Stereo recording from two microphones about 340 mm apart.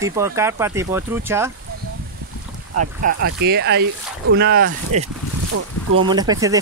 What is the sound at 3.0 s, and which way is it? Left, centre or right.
Speech, right.